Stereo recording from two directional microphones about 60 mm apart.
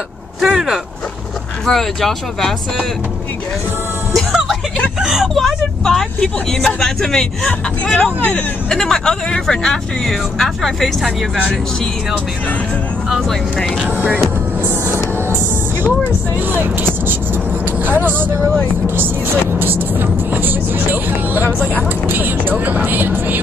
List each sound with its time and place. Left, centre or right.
0.4 s speech: centre
1.7 s speech: centre
4.1 s music: centre
5.0 s speech: centre
7.8 s speech: left
8.6 s speech: centre
19.6 s speech: right